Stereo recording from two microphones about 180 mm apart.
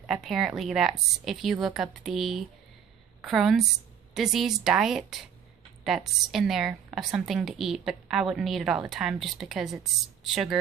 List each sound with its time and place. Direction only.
0.0 s a woman's voice: centre (ahead or behind)